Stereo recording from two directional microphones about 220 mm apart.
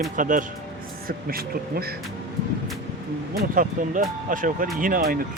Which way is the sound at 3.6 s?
35° right (ahead or behind).